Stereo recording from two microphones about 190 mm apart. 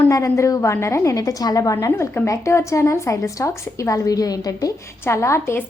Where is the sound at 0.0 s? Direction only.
15° left (ahead or behind).